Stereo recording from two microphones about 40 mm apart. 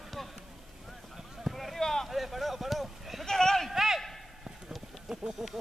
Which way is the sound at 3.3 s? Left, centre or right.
Centre.